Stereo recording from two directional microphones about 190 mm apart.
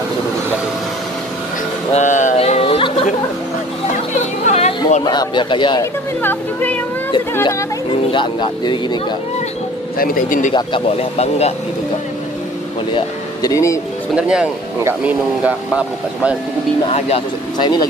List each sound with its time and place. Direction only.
2.0 s a sound: 40° left (ahead or behind)
4.5 s a sound: 35° left (ahead or behind)
5.0 s speech: 20° left (ahead or behind)
6.2 s speech: 10° left (ahead or behind)
8.1 s speech: 25° left (ahead or behind)
9.9 s speech: 50° left (ahead or behind)
10.5 s speech: 30° left (ahead or behind)
12.9 s speech: 20° left (ahead or behind)
14.1 s speech: 5° right (ahead or behind)
16.8 s speech: 30° left (ahead or behind)